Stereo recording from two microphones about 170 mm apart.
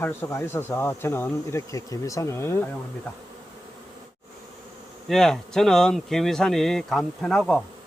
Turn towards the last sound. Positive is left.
turn(degrees=5)  # may be behind; listen again after turning